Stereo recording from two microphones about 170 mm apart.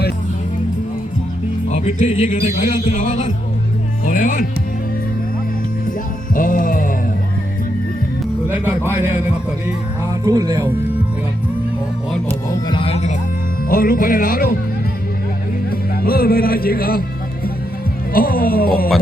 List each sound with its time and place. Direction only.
1.6 s speech: 40° left (ahead or behind)
6.3 s music: 55° left (ahead or behind)
8.4 s speech: 10° right (ahead or behind)
10.2 s speech: 20° right (ahead or behind)
12.5 s music: 30° left (ahead or behind)
13.7 s speech: 60° left (ahead or behind)
15.7 s speech: 60° left (ahead or behind)
18.1 s speech: 60° left (ahead or behind)